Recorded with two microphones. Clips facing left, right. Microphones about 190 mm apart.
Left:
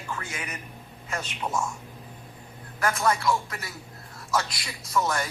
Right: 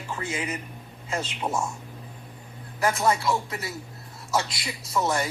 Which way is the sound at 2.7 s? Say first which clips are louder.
Right 2 dB; 25° right (ahead or behind).